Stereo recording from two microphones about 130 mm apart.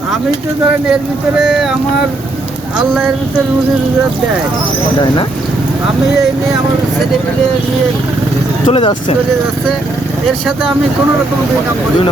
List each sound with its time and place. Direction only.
1.4 s speech: 5° right (ahead or behind)
8.6 s speech: 40° left (ahead or behind)